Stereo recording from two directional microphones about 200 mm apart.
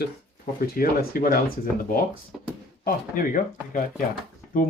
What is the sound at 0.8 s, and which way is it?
Speech, 45° left (ahead or behind).